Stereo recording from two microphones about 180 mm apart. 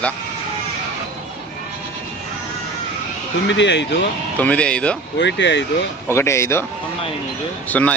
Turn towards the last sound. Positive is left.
turn(degrees=10)  # may be behind; listen again after turning